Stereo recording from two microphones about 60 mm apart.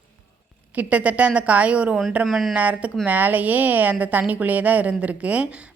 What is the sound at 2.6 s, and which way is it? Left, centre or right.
A woman's voice, right.